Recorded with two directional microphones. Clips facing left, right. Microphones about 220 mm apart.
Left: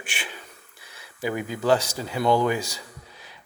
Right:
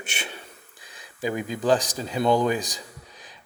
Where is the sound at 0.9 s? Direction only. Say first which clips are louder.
Even; 15° right (ahead or behind).